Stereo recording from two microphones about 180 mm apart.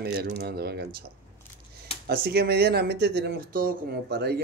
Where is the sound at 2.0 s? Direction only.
60° right (ahead or behind).